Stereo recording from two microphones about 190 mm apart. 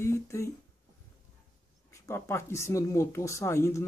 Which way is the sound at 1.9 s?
15° left (ahead or behind).